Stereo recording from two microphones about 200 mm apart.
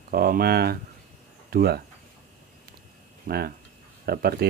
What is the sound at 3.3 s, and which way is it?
Speech, 45° right (ahead or behind).